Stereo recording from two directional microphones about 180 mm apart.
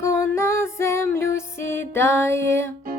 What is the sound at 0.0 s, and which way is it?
Music, 15° left (ahead or behind).